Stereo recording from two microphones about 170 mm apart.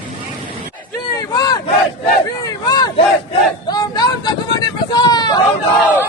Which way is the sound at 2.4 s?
25° left (ahead or behind).